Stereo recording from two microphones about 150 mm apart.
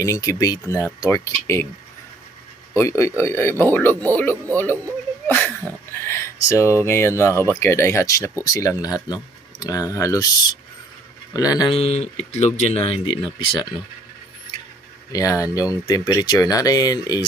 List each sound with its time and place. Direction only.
0.0 s speech: 20° left (ahead or behind)
2.7 s a man's voice: 20° left (ahead or behind)
5.3 s a sound: 15° left (ahead or behind)
6.8 s speech: 20° left (ahead or behind)
11.7 s speech: 40° left (ahead or behind)
15.1 s speech: 25° left (ahead or behind)